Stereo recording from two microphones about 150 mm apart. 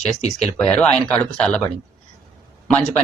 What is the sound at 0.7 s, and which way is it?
Speech, 10° left (ahead or behind).